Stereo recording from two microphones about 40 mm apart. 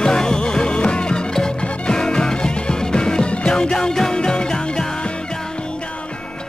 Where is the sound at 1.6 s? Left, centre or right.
Left.